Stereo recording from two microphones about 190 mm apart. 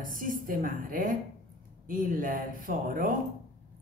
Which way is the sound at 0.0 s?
45° right (ahead or behind).